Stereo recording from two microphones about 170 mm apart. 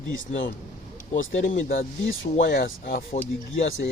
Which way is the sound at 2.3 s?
90° left.